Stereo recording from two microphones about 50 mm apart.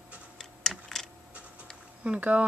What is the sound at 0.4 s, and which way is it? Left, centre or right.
Tick-tock, centre.